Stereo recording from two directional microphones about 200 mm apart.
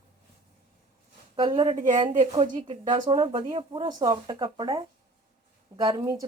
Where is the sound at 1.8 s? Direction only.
40° right (ahead or behind).